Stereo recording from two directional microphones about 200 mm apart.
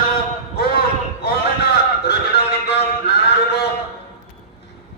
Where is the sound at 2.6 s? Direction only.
55° left (ahead or behind).